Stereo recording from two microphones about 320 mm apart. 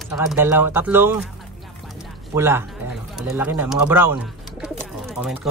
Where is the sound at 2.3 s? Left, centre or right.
Centre.